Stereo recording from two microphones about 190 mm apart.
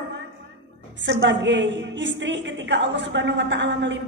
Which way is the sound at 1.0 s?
70° right (ahead or behind).